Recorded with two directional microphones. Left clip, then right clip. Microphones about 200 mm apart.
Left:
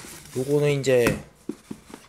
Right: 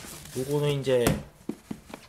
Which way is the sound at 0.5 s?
20° left (ahead or behind).